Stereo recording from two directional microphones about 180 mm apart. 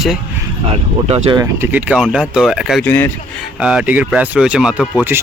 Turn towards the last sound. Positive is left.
turn(degrees=-10)  # may be behind; listen again after turning